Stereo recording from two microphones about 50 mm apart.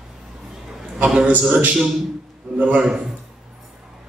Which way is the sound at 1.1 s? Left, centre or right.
Right.